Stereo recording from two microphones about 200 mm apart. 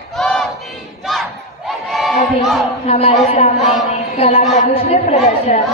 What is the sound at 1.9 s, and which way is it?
Crowd, centre (ahead or behind).